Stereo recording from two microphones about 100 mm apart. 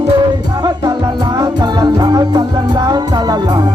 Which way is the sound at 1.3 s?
45° right (ahead or behind).